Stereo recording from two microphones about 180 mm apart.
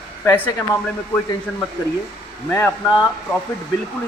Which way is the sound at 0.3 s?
15° left (ahead or behind).